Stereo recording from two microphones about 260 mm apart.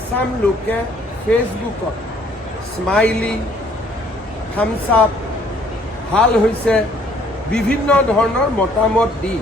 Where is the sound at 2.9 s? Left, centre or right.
Centre.